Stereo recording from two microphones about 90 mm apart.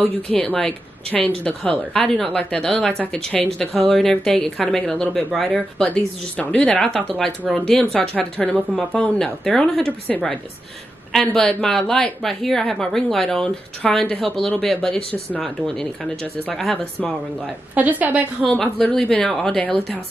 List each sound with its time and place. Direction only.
0.0 s a woman's voice: 10° left (ahead or behind)
5.9 s a woman's voice: 15° left (ahead or behind)
11.4 s a woman's voice: 5° left (ahead or behind)
17.7 s a woman's voice: 15° right (ahead or behind)
18.6 s speech: 10° left (ahead or behind)